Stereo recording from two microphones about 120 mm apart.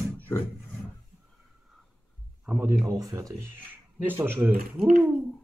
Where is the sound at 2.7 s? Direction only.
30° right (ahead or behind); by 4.9 s 10° right (ahead or behind).